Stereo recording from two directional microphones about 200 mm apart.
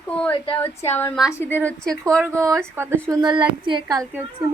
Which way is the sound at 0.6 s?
10° left (ahead or behind).